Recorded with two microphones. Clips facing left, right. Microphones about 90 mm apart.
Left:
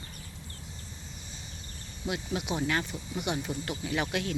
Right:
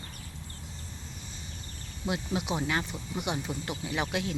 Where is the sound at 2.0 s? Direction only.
25° right (ahead or behind).